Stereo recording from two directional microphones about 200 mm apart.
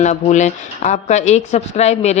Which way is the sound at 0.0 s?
35° left (ahead or behind).